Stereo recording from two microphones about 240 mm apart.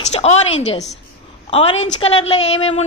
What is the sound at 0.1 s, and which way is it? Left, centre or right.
A woman's voice, left.